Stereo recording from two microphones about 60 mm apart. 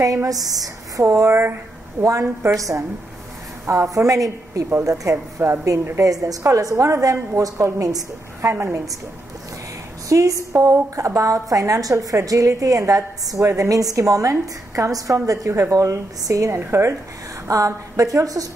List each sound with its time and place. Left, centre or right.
0.0 s a woman's voice: right
2.0 s a woman's voice: right
5.1 s a sound: right
5.7 s a woman's voice: right
6.4 s a woman's voice: right
8.4 s a woman's voice: right
10.0 s a sound: right
11.1 s a woman's voice: right
15.2 s a woman's voice: right
16.4 s a woman's voice: right
17.5 s a woman's voice: right